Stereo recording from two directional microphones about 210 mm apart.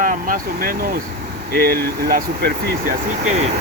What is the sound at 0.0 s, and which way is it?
Speech, 40° right (ahead or behind).